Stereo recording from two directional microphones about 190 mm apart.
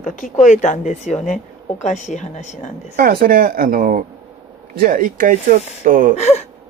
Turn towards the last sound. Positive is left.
turn(degrees=35)  # may be behind; listen again after turning